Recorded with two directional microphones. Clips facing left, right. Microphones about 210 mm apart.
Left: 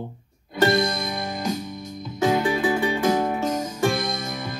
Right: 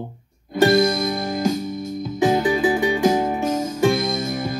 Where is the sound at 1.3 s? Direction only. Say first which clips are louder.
Right 6 dB; 50° right (ahead or behind).